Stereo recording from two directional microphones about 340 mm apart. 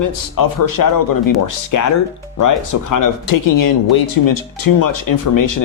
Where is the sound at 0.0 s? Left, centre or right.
Left.